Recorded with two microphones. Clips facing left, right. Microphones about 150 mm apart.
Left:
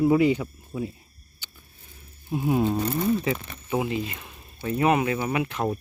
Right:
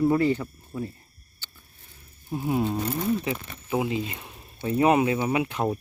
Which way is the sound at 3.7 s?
20° right (ahead or behind).